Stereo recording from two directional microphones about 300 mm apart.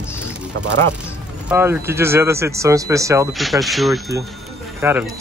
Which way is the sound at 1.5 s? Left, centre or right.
Centre.